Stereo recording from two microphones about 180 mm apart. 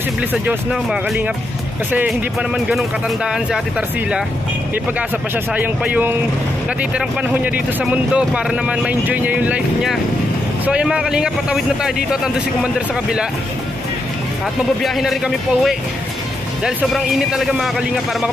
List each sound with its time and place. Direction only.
0.3 s a man's voice: 10° right (ahead or behind)
5.5 s a man's voice: 10° right (ahead or behind)
14.8 s a man's voice: centre (ahead or behind)